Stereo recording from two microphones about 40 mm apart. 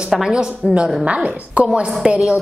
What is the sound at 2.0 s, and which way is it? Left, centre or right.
Speech, centre.